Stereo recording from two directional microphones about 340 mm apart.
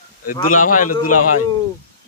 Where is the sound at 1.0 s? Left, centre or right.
Left.